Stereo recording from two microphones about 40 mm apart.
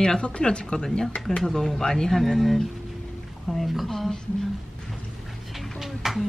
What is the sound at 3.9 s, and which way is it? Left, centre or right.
Speech, centre.